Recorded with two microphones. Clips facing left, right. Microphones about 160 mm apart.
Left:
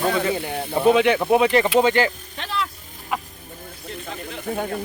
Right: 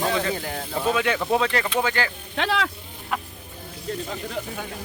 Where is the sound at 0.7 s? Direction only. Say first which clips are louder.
Left 7 dB; 25° left (ahead or behind).